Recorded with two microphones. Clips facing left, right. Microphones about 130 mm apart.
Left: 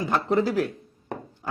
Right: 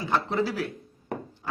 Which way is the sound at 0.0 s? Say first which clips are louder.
Left 3 dB; 45° left (ahead or behind).